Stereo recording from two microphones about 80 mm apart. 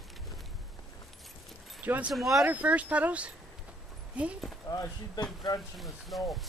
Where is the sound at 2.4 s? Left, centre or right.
Centre.